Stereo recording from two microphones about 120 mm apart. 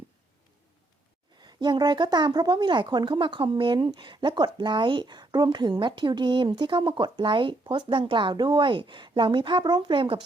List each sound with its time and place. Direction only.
1.4 s a woman's voice: 35° right (ahead or behind)